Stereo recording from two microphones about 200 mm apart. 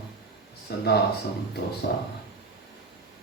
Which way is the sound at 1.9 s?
55° left (ahead or behind).